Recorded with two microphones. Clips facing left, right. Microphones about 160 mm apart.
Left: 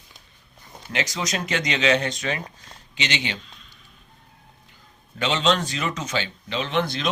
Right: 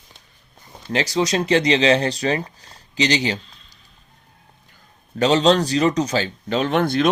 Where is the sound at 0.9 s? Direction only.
35° right (ahead or behind).